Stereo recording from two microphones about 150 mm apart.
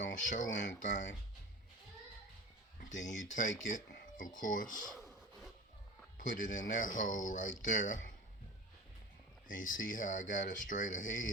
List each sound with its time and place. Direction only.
0.0 s speech: 60° left (ahead or behind)
2.9 s speech: 55° left (ahead or behind)
4.9 s rub: centre (ahead or behind)
6.1 s speech: 60° left (ahead or behind)
9.5 s speech: 60° left (ahead or behind)